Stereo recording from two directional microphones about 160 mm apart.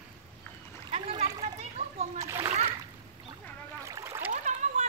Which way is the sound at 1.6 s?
40° right (ahead or behind).